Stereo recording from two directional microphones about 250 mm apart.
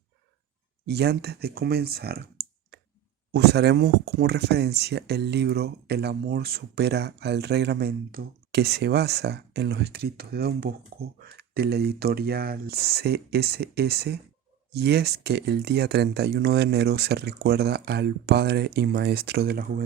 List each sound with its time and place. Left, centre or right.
0.9 s speech: right
3.3 s speech: right